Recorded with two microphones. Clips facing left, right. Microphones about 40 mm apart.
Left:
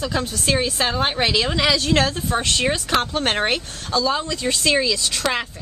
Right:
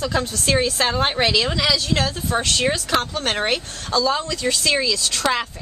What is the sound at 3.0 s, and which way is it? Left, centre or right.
Speech, left.